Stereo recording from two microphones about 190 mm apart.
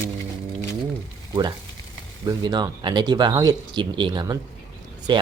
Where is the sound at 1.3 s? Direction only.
25° right (ahead or behind).